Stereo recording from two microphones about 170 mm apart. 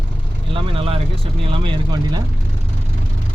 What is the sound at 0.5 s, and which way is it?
Speech, 35° right (ahead or behind).